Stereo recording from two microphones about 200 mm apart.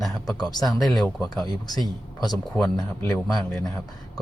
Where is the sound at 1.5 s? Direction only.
20° left (ahead or behind).